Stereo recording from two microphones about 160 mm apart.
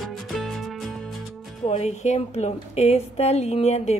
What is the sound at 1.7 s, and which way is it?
A woman's voice, 45° left (ahead or behind).